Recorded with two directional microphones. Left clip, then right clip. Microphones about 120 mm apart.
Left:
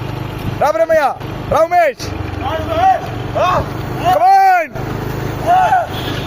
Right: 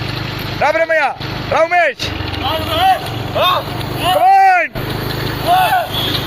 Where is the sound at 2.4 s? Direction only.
10° left (ahead or behind).